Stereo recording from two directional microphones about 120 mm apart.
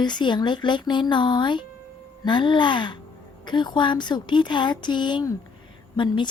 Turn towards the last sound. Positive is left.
turn(degrees=40)  # may be behind; listen again after turning